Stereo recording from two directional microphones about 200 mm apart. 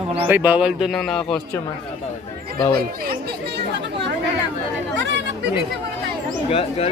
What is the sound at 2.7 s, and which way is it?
Chatter, 50° right (ahead or behind).